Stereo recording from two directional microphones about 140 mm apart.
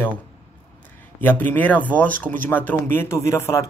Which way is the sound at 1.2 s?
15° left (ahead or behind).